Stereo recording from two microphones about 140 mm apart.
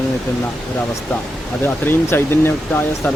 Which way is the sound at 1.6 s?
15° left (ahead or behind).